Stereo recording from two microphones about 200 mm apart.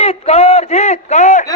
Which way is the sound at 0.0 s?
30° left (ahead or behind).